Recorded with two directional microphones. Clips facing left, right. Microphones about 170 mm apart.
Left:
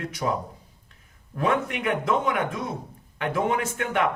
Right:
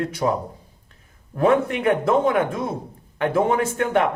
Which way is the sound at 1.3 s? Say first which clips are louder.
Right 7 dB; 35° right (ahead or behind).